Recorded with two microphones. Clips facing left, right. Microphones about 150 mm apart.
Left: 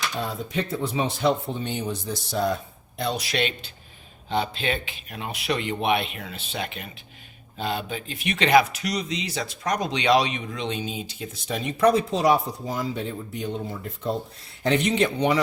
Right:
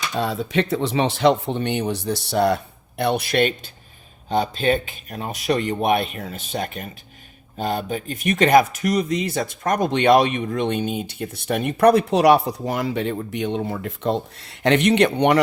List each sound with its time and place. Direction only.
0.2 s speech: 90° right; by 2.6 s 70° right (ahead or behind)
3.0 s speech: 60° right (ahead or behind)